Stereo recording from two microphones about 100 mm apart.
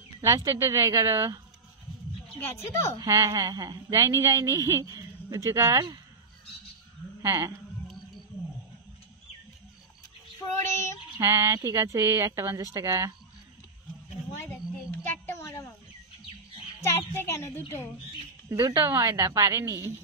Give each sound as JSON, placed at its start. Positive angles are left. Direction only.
{"t": 0.2, "sound": "speech", "side_deg": -30}
{"t": 2.4, "sound": "a woman's voice", "side_deg": 30}
{"t": 3.0, "sound": "speech", "side_deg": -35}
{"t": 7.2, "sound": "speech", "side_deg": -35}
{"t": 11.1, "sound": "speech", "side_deg": -30}
{"t": 14.3, "sound": "a sound", "side_deg": 25}
{"t": 16.8, "sound": "a woman's voice", "side_deg": 25}
{"t": 18.5, "sound": "speech", "side_deg": -35}